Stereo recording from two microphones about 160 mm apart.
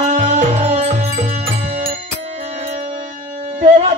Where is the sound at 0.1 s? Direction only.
50° right (ahead or behind).